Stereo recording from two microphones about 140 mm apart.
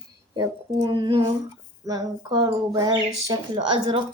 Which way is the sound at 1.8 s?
30° right (ahead or behind).